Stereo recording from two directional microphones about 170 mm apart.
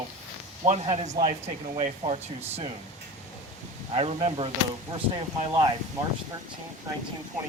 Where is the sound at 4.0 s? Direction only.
35° right (ahead or behind).